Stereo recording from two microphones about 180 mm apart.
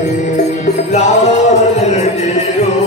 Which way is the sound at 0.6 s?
40° left (ahead or behind).